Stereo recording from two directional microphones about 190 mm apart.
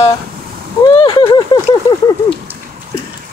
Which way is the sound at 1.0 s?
25° left (ahead or behind).